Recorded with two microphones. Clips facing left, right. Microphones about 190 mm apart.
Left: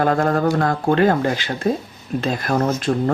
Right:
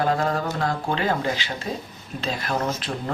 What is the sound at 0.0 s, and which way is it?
Speech, 50° left (ahead or behind).